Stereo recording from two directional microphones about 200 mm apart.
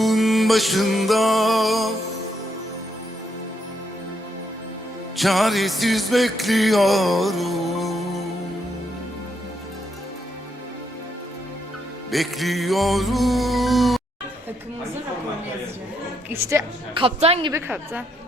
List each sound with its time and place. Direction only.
0.0 s music: centre (ahead or behind)
5.1 s music: centre (ahead or behind)
12.1 s music: centre (ahead or behind)
16.3 s a woman's voice: 15° right (ahead or behind)
17.0 s a woman's voice: 30° right (ahead or behind)
17.5 s a woman's voice: 10° right (ahead or behind)